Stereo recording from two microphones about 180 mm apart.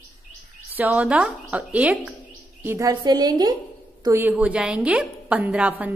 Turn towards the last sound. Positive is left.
turn(degrees=-10)  # may be behind; listen again after turning